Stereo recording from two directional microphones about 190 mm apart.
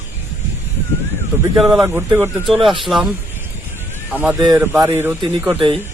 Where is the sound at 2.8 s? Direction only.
Centre (ahead or behind).